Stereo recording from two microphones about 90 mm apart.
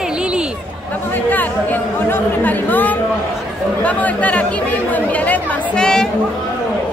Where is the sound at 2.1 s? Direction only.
20° left (ahead or behind).